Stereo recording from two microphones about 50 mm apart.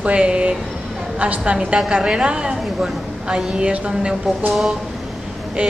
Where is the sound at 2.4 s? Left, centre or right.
Centre.